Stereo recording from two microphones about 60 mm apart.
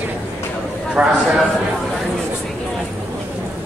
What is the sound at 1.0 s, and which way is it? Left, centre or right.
Speech, centre.